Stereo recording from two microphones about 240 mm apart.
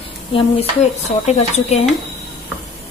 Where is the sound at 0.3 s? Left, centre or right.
Left.